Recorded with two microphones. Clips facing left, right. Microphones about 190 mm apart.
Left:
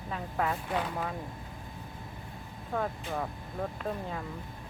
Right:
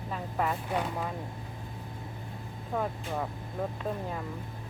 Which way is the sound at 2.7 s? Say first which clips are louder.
Right 1 dB; 5° right (ahead or behind).